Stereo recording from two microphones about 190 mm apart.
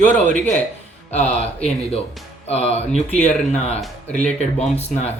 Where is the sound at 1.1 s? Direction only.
35° left (ahead or behind).